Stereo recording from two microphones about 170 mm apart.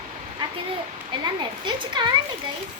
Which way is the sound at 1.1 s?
30° right (ahead or behind).